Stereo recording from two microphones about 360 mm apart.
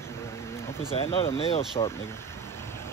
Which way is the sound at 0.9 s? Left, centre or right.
Centre.